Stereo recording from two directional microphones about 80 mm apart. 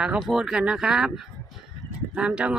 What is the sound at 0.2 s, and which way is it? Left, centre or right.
Speech, centre.